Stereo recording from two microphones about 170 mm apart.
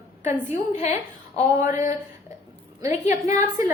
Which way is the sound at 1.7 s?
50° left (ahead or behind).